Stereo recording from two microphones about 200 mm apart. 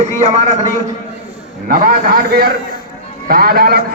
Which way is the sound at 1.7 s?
45° right (ahead or behind).